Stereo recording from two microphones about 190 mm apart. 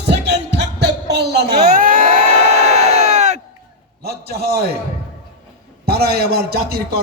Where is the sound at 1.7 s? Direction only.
50° right (ahead or behind).